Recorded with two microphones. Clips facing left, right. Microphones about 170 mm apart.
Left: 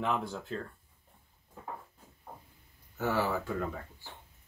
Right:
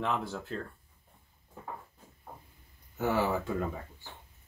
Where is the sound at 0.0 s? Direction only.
Centre (ahead or behind).